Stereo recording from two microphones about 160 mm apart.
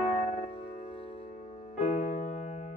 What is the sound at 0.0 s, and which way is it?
Music, 45° left (ahead or behind).